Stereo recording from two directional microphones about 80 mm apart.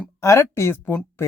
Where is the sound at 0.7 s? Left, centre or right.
Left.